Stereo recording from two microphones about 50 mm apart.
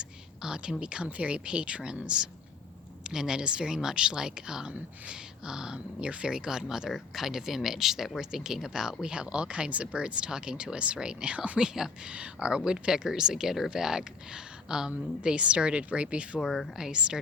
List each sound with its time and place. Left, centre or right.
0.0 s speech: centre
11.6 s speech: centre
12.0 s speech: right
16.4 s speech: centre
16.7 s speech: centre